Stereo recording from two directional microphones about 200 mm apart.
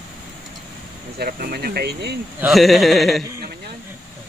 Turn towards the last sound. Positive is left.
turn(degrees=0)  # may be behind; listen again after turning